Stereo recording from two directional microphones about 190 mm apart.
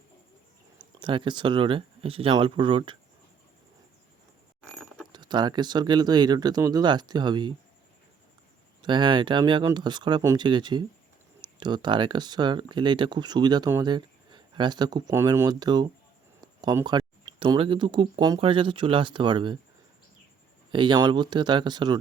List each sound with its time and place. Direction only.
0.9 s speech: 25° right (ahead or behind)
5.1 s speech: 25° right (ahead or behind)
8.8 s speech: 25° right (ahead or behind)
20.7 s speech: 25° right (ahead or behind)